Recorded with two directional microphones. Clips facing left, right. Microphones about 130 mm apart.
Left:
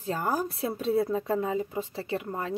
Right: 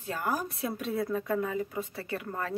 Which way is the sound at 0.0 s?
30° left (ahead or behind).